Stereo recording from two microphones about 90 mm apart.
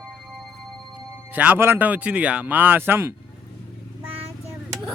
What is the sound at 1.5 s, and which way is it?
Speech, 25° right (ahead or behind).